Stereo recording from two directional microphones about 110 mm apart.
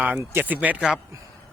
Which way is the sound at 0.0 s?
15° right (ahead or behind).